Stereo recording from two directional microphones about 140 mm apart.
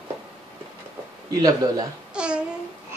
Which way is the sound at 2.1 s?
5° right (ahead or behind).